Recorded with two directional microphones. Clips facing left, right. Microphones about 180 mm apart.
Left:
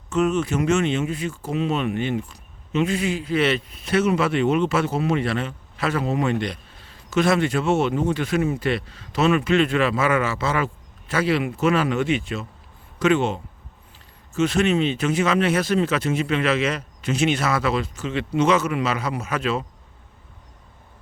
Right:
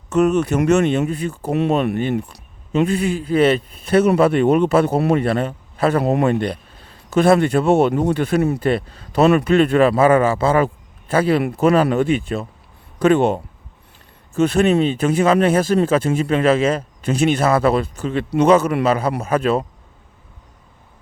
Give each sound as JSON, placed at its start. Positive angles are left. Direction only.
{"t": 0.1, "sound": "speech", "side_deg": -65}
{"t": 0.8, "sound": "a man's voice", "side_deg": -40}
{"t": 1.3, "sound": "speech", "side_deg": -60}
{"t": 1.7, "sound": "a man's voice", "side_deg": -40}
{"t": 2.7, "sound": "a man's voice", "side_deg": -50}
{"t": 14.7, "sound": "a man's voice", "side_deg": -40}